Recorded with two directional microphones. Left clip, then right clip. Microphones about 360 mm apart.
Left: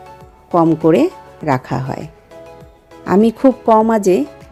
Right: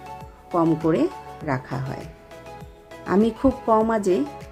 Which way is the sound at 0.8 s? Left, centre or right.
Centre.